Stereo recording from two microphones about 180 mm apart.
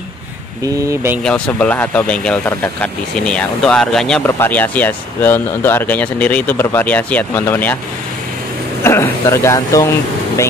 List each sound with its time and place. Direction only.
0.8 s speech: 10° right (ahead or behind)
1.2 s speech: 5° left (ahead or behind)
8.8 s speech: 15° left (ahead or behind)